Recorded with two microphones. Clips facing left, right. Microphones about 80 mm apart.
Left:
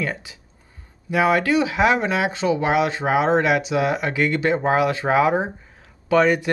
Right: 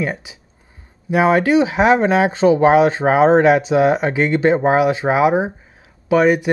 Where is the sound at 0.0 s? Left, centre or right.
Centre.